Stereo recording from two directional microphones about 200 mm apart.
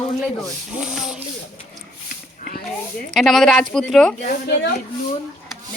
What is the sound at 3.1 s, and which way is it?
Speech, centre (ahead or behind).